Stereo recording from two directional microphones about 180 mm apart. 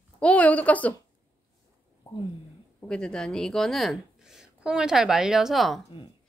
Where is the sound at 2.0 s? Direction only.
30° left (ahead or behind).